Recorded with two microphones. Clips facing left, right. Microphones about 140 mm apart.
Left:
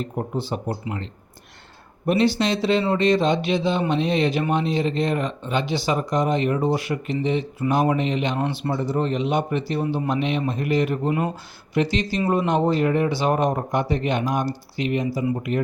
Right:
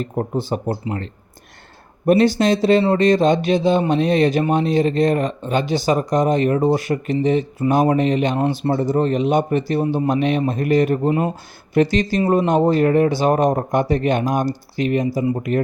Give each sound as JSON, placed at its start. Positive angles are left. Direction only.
{"t": 0.0, "sound": "a man's voice", "side_deg": -45}